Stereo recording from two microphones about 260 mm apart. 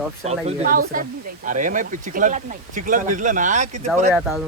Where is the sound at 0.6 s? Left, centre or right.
Right.